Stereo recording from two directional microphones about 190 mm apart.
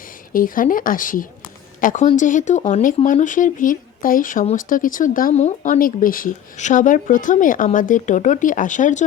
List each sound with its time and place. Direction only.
0.3 s speech: 45° left (ahead or behind)